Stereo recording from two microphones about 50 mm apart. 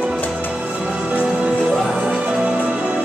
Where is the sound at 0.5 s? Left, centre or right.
Right.